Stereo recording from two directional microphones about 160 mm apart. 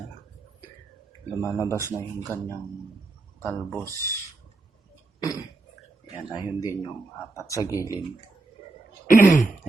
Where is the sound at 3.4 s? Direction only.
5° left (ahead or behind).